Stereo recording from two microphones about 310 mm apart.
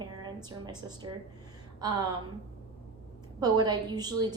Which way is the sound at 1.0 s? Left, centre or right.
Right.